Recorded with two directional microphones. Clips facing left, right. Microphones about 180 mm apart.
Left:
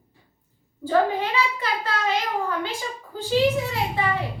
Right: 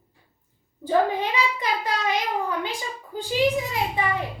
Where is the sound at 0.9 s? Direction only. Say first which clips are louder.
Even; 15° right (ahead or behind).